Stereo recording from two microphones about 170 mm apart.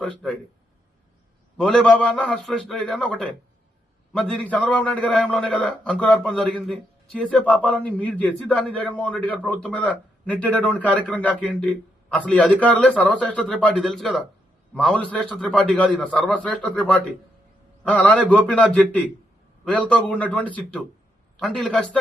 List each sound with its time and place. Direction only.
0.0 s a man's voice: 5° left (ahead or behind)
1.5 s a man's voice: 5° left (ahead or behind)